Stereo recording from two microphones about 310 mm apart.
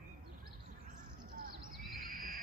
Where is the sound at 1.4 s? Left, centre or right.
Right.